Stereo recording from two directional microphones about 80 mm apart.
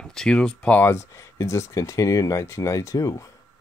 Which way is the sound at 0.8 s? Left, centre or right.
Left.